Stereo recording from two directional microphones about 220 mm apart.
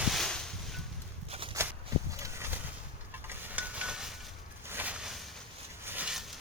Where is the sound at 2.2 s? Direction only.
10° right (ahead or behind).